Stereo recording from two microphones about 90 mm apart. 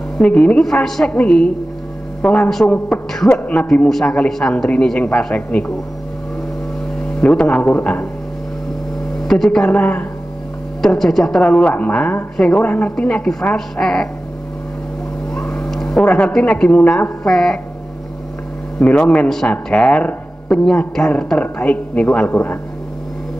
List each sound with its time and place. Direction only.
0.2 s speech: 10° left (ahead or behind)
7.2 s speech: 10° left (ahead or behind)
9.3 s speech: 5° left (ahead or behind)
9.7 s speech: 15° left (ahead or behind)
10.8 s speech: 5° left (ahead or behind)
15.3 s speech: 10° left (ahead or behind)
18.8 s speech: 10° left (ahead or behind)